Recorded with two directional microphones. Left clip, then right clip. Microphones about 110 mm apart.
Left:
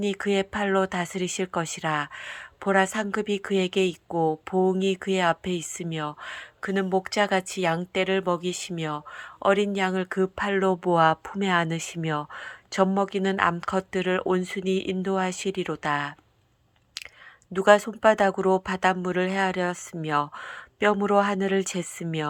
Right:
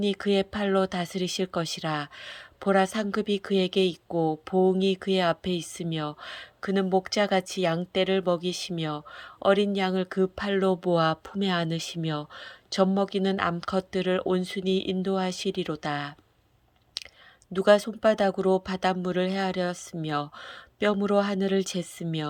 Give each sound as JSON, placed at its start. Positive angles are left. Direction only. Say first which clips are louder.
{"t": 0.0, "sound": "speech", "louder": "even", "side_deg": -20}
{"t": 17.5, "sound": "speech", "louder": "left 2 dB", "side_deg": -15}